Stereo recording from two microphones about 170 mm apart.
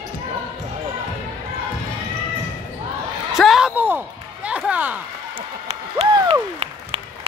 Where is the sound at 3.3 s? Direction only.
Centre (ahead or behind).